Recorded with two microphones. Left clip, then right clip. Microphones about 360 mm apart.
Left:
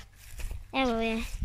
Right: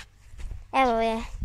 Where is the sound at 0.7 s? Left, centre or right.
Centre.